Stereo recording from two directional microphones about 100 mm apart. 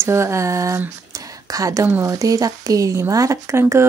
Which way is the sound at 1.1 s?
35° right (ahead or behind).